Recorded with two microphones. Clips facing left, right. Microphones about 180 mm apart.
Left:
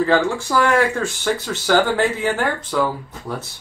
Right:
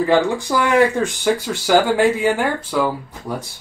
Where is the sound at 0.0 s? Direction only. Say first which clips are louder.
Right 1 dB; 15° right (ahead or behind).